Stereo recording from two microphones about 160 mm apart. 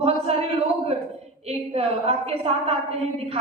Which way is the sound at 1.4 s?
40° right (ahead or behind).